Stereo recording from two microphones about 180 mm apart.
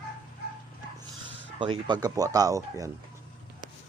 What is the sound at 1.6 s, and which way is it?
Speech, 25° right (ahead or behind).